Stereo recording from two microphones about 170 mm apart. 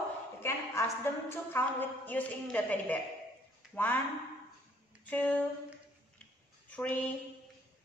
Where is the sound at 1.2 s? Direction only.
10° left (ahead or behind).